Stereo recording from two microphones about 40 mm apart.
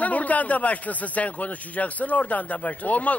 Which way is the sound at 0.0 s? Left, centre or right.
Left.